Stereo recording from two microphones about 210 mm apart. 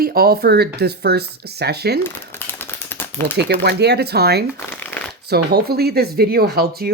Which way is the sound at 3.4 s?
50° right (ahead or behind).